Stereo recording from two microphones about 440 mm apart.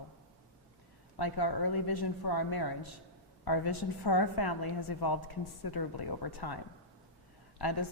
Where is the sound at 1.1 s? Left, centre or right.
Left.